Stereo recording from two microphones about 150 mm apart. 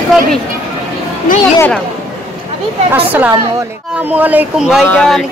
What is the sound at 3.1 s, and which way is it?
Speech, 10° right (ahead or behind).